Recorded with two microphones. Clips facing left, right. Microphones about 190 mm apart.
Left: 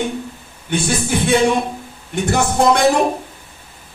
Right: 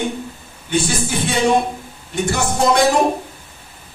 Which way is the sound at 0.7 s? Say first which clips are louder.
Left 1 dB; 60° left (ahead or behind).